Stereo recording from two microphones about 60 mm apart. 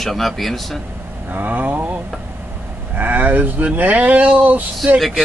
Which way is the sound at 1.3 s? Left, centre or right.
Right.